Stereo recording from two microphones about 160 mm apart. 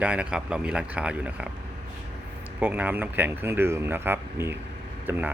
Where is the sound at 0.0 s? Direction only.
5° right (ahead or behind).